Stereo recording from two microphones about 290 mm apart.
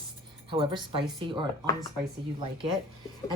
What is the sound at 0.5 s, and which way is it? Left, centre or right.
Speech, centre.